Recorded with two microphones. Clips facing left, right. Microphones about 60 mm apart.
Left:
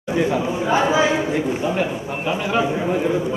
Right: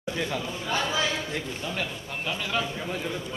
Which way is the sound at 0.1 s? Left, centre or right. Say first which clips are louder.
Left 11 dB; left.